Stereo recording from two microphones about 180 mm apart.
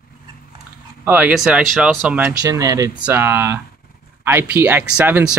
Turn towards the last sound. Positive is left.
turn(degrees=-10)  # may be behind; listen again after turning